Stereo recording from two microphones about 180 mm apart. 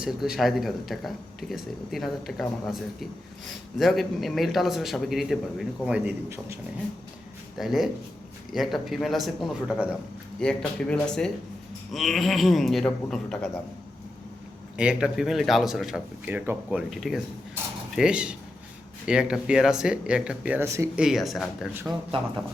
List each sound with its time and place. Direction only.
0.0 s speech: centre (ahead or behind)
7.5 s speech: centre (ahead or behind)
14.8 s speech: 5° right (ahead or behind)
21.0 s speech: centre (ahead or behind)
22.1 s speech: 30° right (ahead or behind)